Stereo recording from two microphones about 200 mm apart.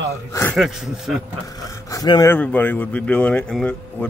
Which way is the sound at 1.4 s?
15° left (ahead or behind).